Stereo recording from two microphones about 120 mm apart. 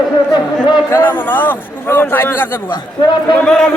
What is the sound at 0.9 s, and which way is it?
A man's voice, 15° left (ahead or behind).